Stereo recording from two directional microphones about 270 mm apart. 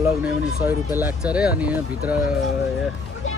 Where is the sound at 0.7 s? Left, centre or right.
Centre.